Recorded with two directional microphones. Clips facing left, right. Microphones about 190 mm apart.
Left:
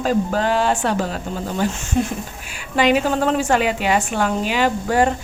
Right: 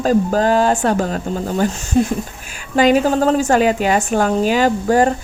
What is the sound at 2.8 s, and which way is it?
A woman's voice, 40° right (ahead or behind).